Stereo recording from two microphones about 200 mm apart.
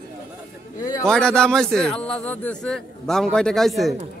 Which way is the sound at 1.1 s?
5° left (ahead or behind).